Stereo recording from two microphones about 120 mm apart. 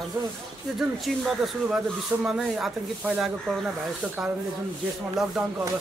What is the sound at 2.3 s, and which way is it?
Speech, 5° right (ahead or behind).